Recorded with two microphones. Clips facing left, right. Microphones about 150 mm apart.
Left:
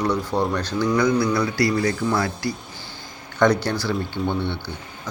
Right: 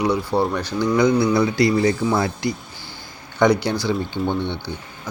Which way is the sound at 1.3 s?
25° right (ahead or behind).